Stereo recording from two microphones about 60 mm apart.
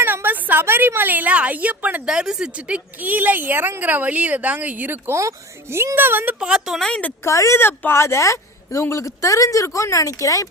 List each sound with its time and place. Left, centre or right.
0.0 s a woman's voice: right
2.0 s speech: centre; by 4.9 s right
5.0 s speech: right
6.4 s speech: centre
6.7 s a woman's voice: centre
7.3 s a woman's voice: left
7.6 s speech: left
8.0 s a woman's voice: left